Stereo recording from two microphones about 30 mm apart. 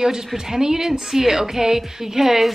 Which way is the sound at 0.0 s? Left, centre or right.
Centre.